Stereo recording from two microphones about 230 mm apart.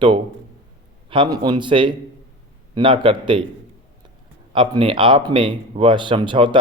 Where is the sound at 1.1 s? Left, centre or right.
Centre.